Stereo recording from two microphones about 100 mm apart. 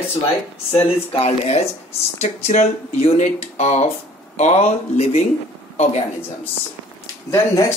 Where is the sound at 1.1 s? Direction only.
90° left.